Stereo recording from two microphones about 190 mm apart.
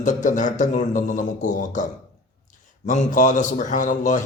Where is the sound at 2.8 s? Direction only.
45° left (ahead or behind).